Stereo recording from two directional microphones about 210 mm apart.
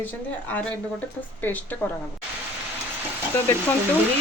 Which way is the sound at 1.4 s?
10° left (ahead or behind).